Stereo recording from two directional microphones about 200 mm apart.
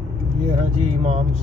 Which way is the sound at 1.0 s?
30° right (ahead or behind).